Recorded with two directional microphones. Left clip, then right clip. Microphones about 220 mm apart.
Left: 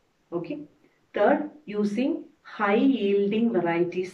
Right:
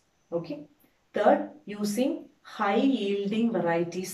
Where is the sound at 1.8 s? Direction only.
25° right (ahead or behind).